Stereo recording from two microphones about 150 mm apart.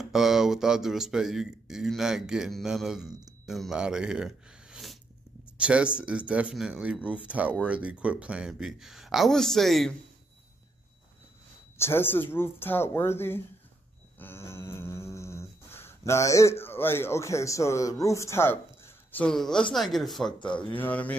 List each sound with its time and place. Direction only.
0.0 s speech: centre (ahead or behind)
11.8 s speech: 15° left (ahead or behind)
14.1 s a sound: 15° left (ahead or behind)
19.2 s speech: 5° left (ahead or behind)